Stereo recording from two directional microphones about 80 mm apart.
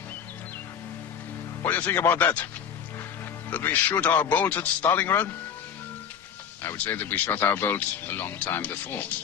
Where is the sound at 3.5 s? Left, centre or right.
Left.